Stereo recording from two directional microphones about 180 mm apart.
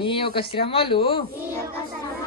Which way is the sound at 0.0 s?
30° left (ahead or behind).